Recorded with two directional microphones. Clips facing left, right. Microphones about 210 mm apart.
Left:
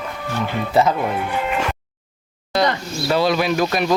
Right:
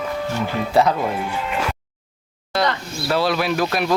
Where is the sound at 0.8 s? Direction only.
Centre (ahead or behind).